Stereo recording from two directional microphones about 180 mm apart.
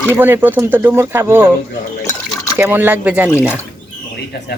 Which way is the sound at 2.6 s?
10° right (ahead or behind).